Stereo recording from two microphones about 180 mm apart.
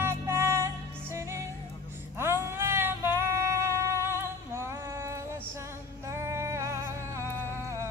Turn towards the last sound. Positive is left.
turn(degrees=-15)  # may be behind; listen again after turning